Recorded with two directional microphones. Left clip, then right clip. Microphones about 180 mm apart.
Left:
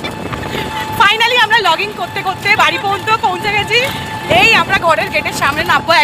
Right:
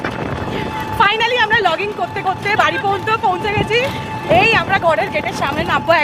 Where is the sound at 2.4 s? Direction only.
15° right (ahead or behind).